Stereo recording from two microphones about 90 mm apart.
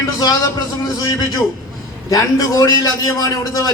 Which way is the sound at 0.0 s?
40° left (ahead or behind).